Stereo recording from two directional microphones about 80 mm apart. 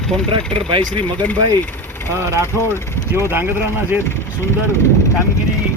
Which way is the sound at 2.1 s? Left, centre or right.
Right.